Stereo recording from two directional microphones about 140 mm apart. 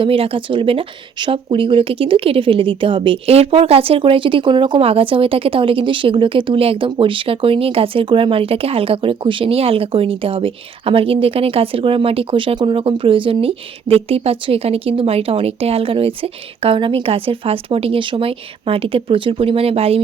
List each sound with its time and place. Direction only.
0.0 s speech: 40° right (ahead or behind)